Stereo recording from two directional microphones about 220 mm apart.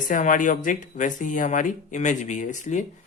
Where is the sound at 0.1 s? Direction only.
35° left (ahead or behind).